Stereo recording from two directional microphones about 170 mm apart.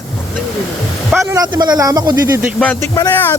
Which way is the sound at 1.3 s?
25° right (ahead or behind).